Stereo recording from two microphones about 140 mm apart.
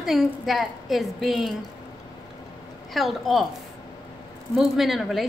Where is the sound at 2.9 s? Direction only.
Centre (ahead or behind).